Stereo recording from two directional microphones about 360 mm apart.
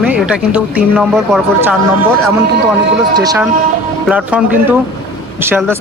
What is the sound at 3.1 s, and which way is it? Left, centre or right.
Speech, centre.